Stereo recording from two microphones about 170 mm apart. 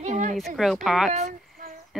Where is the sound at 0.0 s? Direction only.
45° right (ahead or behind).